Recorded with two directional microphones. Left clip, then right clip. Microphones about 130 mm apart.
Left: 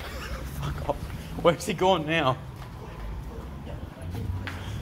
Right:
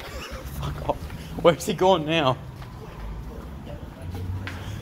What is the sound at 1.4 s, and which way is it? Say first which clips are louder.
Speech: right 4 dB; 45° right (ahead or behind).